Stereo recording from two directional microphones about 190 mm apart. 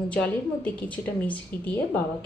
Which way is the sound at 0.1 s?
5° left (ahead or behind).